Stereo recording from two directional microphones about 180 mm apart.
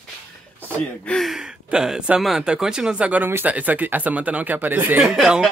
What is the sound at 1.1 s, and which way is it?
Speech, centre (ahead or behind).